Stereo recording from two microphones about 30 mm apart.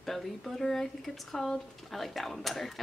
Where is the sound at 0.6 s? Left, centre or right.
Centre.